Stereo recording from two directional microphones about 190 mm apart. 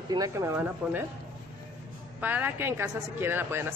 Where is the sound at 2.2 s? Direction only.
10° right (ahead or behind).